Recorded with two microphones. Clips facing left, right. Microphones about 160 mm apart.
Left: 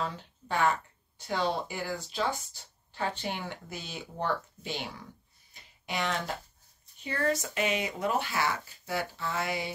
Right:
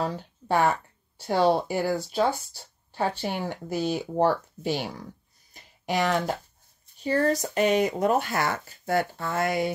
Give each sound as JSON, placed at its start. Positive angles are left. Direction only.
{"t": 0.0, "sound": "speech", "side_deg": -40}
{"t": 5.5, "sound": "a sound", "side_deg": -45}
{"t": 7.0, "sound": "speech", "side_deg": -35}